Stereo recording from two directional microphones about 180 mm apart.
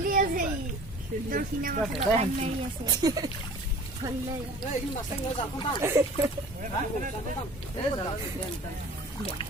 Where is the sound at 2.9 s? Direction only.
20° right (ahead or behind).